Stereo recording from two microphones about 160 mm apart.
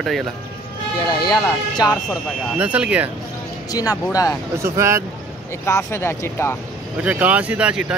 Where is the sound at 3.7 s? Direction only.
25° left (ahead or behind).